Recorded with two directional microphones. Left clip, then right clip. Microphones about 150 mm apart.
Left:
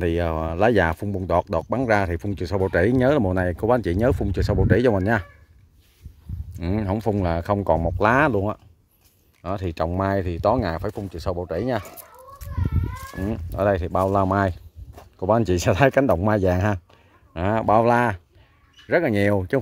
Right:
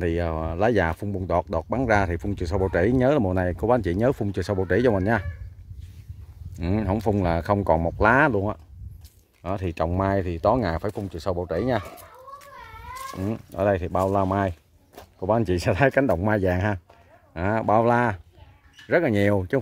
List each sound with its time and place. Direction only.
0.0 s speech: 35° left (ahead or behind); by 5.3 s 20° left (ahead or behind)
6.5 s speech: 10° left (ahead or behind)
13.2 s speech: 25° left (ahead or behind)